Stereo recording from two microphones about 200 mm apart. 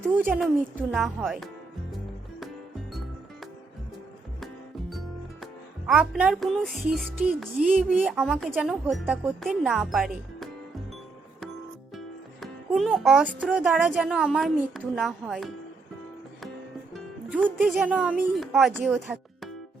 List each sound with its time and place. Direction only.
0.2 s a woman's voice: 5° right (ahead or behind)
4.9 s a woman's voice: centre (ahead or behind)
11.9 s music: centre (ahead or behind)
13.5 s a woman's voice: 5° right (ahead or behind)
16.9 s speech: 5° right (ahead or behind)